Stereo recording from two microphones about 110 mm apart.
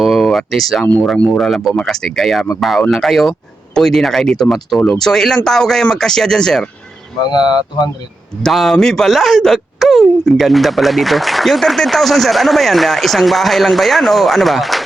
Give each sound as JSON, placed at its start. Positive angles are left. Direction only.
{"t": 0.0, "sound": "a sound", "side_deg": 0}
{"t": 1.0, "sound": "speech", "side_deg": 10}
{"t": 7.3, "sound": "speech", "side_deg": 40}
{"t": 8.4, "sound": "speech", "side_deg": 0}